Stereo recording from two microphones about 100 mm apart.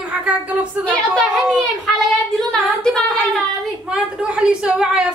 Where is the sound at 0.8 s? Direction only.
5° left (ahead or behind).